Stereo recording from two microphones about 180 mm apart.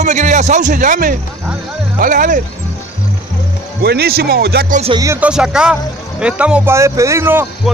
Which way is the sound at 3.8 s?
60° right (ahead or behind).